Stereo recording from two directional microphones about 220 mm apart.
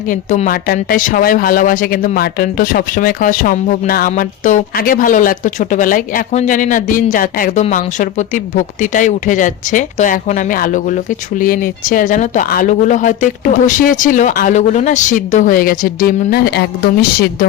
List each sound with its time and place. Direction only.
0.1 s speech: 35° left (ahead or behind)